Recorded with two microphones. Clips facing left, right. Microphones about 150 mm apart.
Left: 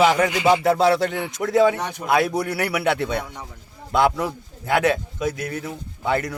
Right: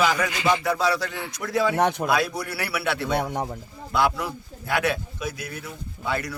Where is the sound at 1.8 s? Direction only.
50° right (ahead or behind).